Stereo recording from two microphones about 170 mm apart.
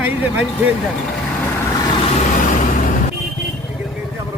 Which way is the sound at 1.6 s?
20° left (ahead or behind).